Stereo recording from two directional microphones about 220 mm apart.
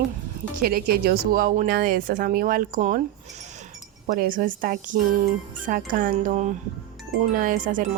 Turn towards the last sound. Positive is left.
turn(degrees=-35)  # may be behind; listen again after turning